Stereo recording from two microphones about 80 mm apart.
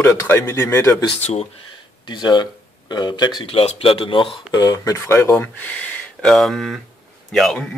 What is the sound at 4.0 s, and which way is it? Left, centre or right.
Speech, left.